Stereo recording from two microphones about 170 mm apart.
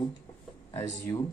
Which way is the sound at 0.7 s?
20° left (ahead or behind).